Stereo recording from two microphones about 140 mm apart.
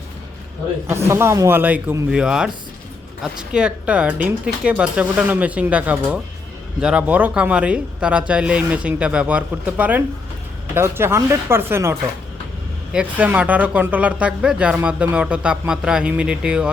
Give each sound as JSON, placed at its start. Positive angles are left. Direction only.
{"t": 0.9, "sound": "speech", "side_deg": -20}